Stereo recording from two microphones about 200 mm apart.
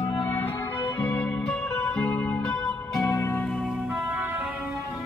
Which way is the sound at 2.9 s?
15° left (ahead or behind).